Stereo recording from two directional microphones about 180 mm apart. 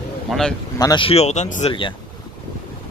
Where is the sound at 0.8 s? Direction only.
25° left (ahead or behind).